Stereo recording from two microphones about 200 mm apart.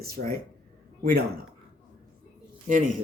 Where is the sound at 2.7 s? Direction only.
40° right (ahead or behind).